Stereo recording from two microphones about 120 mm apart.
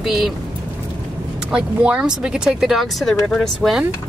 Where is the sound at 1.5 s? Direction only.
10° right (ahead or behind).